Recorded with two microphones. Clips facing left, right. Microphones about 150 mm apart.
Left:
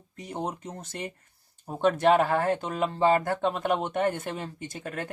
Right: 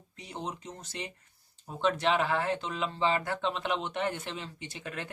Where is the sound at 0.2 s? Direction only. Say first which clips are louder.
Left 6 dB; 50° left (ahead or behind).